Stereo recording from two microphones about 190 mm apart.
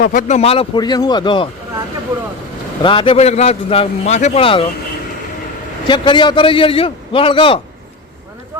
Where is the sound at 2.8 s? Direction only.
25° left (ahead or behind).